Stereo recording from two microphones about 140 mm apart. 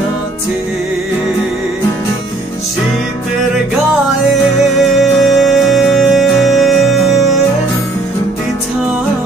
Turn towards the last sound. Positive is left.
turn(degrees=0)  # may be behind; listen again after turning